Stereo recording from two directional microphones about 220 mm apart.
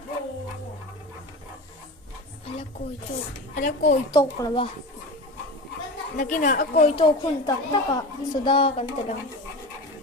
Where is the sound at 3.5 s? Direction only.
35° left (ahead or behind).